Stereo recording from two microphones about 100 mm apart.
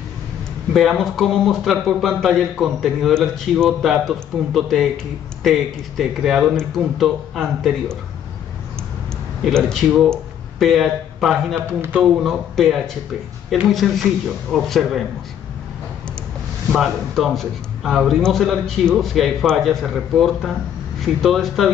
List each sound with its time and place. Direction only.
0.7 s a man's voice: centre (ahead or behind)
9.6 s speech: centre (ahead or behind)
11.5 s a man's voice: 15° right (ahead or behind)
12.0 s a man's voice: centre (ahead or behind)
16.7 s a man's voice: centre (ahead or behind)